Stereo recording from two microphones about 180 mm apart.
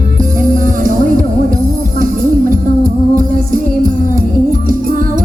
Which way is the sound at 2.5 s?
50° right (ahead or behind).